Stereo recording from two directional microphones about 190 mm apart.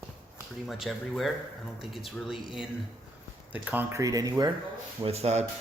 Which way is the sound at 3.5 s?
10° right (ahead or behind).